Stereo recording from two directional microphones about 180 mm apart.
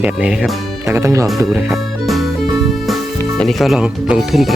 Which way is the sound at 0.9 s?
15° right (ahead or behind).